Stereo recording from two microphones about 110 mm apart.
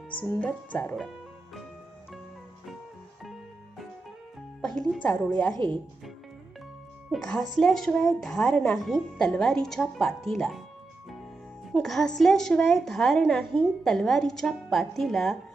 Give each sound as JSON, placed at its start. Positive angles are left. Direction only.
{"t": 0.3, "sound": "speech", "side_deg": 15}
{"t": 4.6, "sound": "speech", "side_deg": 5}
{"t": 5.5, "sound": "speech", "side_deg": -45}
{"t": 7.1, "sound": "a woman's voice", "side_deg": 5}
{"t": 11.7, "sound": "a woman's voice", "side_deg": 5}